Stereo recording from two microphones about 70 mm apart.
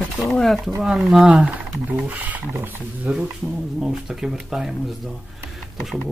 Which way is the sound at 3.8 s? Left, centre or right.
Centre.